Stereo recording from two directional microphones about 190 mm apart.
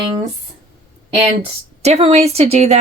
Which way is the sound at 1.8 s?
35° right (ahead or behind).